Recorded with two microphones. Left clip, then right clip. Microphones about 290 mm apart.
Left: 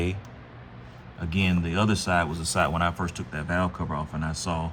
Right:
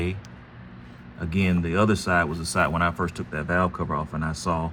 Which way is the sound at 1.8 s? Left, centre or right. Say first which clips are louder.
Right 3 dB; left.